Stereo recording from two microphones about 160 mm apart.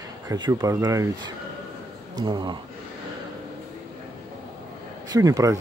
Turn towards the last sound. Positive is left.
turn(degrees=-20)  # may be behind; listen again after turning